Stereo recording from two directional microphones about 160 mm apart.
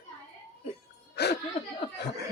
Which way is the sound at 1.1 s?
90° left.